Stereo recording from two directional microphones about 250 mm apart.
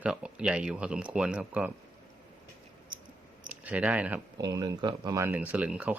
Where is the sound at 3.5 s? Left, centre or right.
Centre.